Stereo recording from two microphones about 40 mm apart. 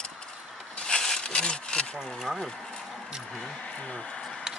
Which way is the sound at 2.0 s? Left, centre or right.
Centre.